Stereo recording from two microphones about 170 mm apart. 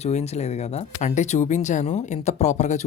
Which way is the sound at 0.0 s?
40° left (ahead or behind).